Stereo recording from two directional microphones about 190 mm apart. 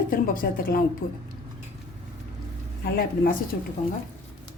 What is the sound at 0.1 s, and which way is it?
A woman's voice, 50° left (ahead or behind).